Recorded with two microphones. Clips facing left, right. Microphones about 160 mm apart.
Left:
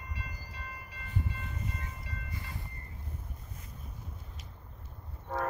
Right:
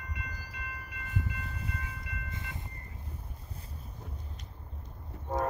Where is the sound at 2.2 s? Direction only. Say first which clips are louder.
Right 1 dB; 20° right (ahead or behind).